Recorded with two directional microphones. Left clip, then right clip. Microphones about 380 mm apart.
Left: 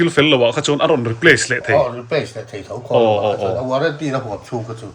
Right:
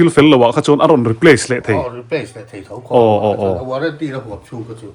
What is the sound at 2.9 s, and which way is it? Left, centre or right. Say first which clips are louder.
Speech: right 3 dB; centre.